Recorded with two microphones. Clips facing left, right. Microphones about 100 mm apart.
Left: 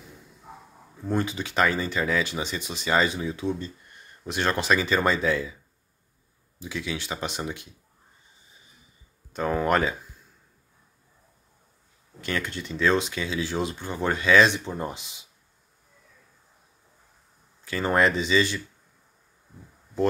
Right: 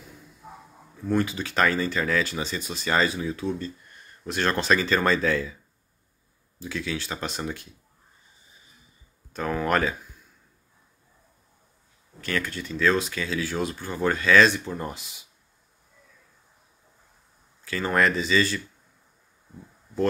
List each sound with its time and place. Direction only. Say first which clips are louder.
1.0 s speech: right 2 dB; 20° left (ahead or behind)
6.6 s speech: right 1 dB; 15° left (ahead or behind)
9.3 s speech: left 1 dB; 25° left (ahead or behind)
12.2 s speech: right 1 dB; 25° left (ahead or behind)
17.6 s speech: left 1 dB; 25° left (ahead or behind)